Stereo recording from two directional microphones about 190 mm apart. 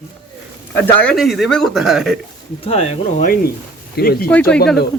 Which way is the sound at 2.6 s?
30° left (ahead or behind).